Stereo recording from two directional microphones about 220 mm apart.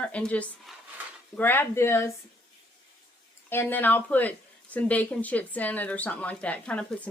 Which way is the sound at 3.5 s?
10° left (ahead or behind).